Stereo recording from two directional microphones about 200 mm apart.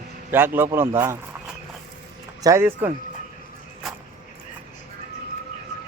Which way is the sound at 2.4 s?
15° right (ahead or behind).